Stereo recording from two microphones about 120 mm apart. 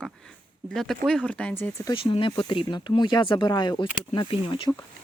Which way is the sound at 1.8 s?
45° left (ahead or behind).